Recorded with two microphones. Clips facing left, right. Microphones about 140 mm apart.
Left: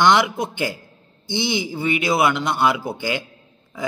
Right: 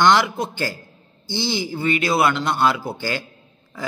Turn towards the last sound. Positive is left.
turn(degrees=20)  # may be behind; listen again after turning